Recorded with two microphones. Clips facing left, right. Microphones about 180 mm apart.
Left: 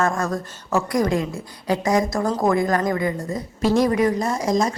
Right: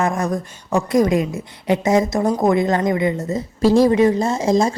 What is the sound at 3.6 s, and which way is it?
A woman's voice, 30° right (ahead or behind).